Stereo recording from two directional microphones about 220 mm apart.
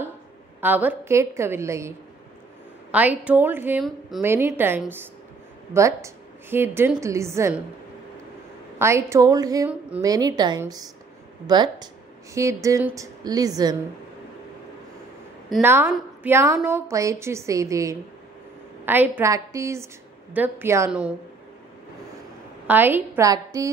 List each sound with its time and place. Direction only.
0.6 s a woman's voice: 10° right (ahead or behind)
8.7 s a woman's voice: 10° right (ahead or behind)
15.6 s a woman's voice: 10° right (ahead or behind)
22.7 s a woman's voice: 10° right (ahead or behind)